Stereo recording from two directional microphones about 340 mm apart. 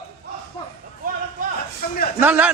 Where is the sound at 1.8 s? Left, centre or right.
Left.